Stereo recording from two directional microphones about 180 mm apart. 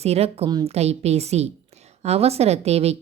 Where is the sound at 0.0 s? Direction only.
35° right (ahead or behind).